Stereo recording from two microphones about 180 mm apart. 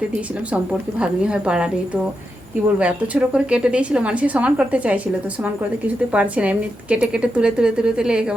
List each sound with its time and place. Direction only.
0.5 s a woman's voice: 5° right (ahead or behind)
2.7 s a woman's voice: 5° right (ahead or behind)
6.1 s a woman's voice: 5° right (ahead or behind)